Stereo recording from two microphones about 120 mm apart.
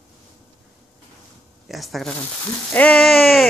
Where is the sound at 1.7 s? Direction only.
Centre (ahead or behind).